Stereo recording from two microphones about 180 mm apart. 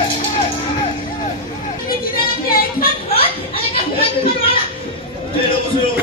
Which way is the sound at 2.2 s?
55° left (ahead or behind).